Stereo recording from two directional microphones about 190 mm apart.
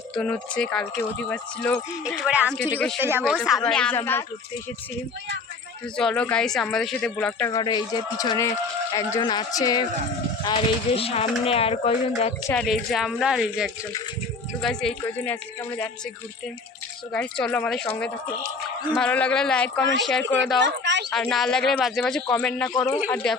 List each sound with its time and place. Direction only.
0.1 s a woman's voice: 5° left (ahead or behind)
2.0 s speech: 5° right (ahead or behind)
3.0 s speech: 10° right (ahead or behind)
3.4 s speech: centre (ahead or behind)
6.0 s speech: 5° left (ahead or behind)
7.5 s a man's voice: 20° left (ahead or behind)
12.6 s a woman's voice: centre (ahead or behind)
17.1 s speech: 5° left (ahead or behind)
20.7 s a sound: 70° right (ahead or behind)
21.1 s a woman's voice: centre (ahead or behind)